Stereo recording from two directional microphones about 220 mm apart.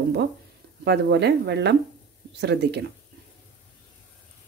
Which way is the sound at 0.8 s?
50° right (ahead or behind).